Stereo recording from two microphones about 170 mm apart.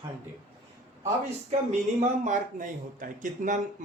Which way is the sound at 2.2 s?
50° right (ahead or behind).